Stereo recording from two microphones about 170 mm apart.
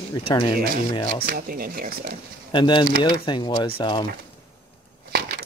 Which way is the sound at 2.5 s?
25° left (ahead or behind).